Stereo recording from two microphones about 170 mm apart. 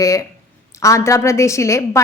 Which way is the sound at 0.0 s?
20° left (ahead or behind).